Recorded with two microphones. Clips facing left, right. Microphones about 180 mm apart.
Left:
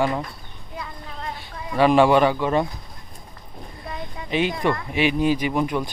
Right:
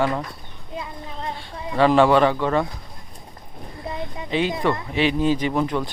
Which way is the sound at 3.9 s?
20° right (ahead or behind).